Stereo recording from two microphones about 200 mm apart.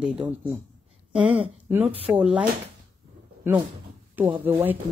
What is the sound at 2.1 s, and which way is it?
Speech, 5° right (ahead or behind).